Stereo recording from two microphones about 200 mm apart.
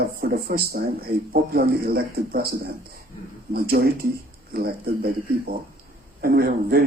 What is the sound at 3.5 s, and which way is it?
Speech, 50° right (ahead or behind).